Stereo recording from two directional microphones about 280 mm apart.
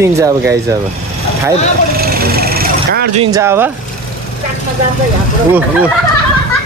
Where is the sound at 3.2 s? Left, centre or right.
Centre.